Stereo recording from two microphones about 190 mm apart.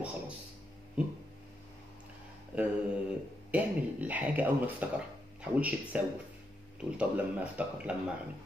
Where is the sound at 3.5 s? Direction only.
10° right (ahead or behind).